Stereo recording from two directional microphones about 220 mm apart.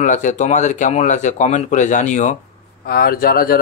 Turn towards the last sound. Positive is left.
turn(degrees=40)  # may be behind; listen again after turning